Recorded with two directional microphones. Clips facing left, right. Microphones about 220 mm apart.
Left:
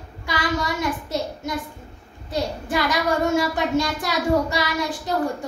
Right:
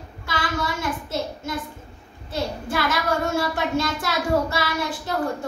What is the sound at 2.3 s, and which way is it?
A child's voice, 15° left (ahead or behind).